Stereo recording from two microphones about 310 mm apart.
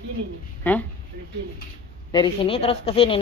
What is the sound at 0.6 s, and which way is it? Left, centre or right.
Speech, centre.